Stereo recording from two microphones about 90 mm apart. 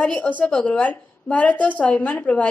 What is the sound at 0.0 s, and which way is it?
A woman's voice, 15° left (ahead or behind).